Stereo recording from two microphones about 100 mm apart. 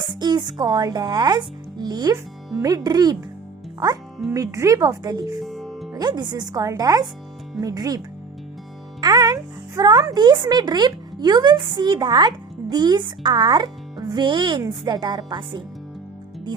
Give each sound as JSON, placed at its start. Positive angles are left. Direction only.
{"t": 0.1, "sound": "speech", "side_deg": -45}
{"t": 4.4, "sound": "speech", "side_deg": -30}
{"t": 5.4, "sound": "music", "side_deg": 0}
{"t": 5.9, "sound": "a child's voice", "side_deg": -45}